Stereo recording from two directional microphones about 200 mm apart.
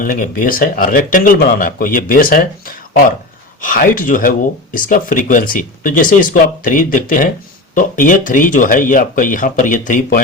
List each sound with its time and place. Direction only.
0.0 s speech: 45° left (ahead or behind)